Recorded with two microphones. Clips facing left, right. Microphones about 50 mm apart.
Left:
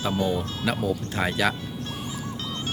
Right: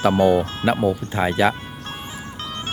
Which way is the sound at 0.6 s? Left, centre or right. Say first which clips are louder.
Right 6 dB; right.